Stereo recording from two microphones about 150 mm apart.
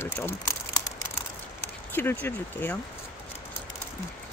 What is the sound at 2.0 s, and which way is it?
Speech, 15° left (ahead or behind).